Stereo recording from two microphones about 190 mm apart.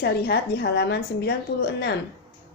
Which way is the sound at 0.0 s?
60° left (ahead or behind).